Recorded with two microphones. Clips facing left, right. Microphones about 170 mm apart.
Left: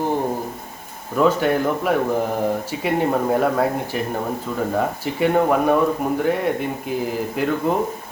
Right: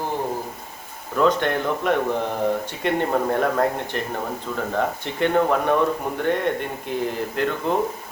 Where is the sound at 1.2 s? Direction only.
5° left (ahead or behind).